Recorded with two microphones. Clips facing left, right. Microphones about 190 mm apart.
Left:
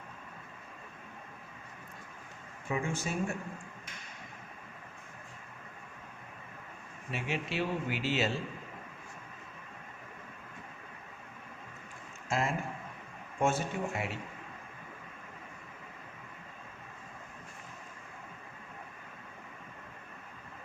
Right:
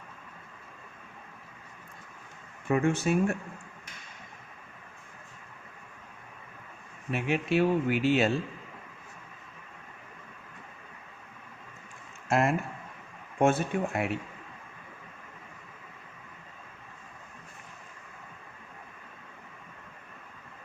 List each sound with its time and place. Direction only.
2.6 s speech: 60° right (ahead or behind)
7.1 s speech: 55° right (ahead or behind)
12.3 s speech: 60° right (ahead or behind)